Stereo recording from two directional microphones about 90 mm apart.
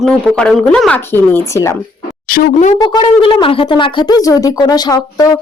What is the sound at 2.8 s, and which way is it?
Speech, 70° left (ahead or behind).